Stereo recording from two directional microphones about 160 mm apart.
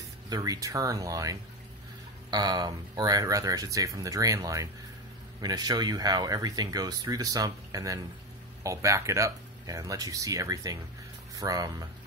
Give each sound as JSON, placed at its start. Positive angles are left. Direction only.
{"t": 0.3, "sound": "speech", "side_deg": -20}